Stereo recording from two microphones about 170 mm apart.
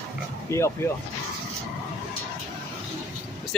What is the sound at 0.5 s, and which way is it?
Speech, 15° left (ahead or behind).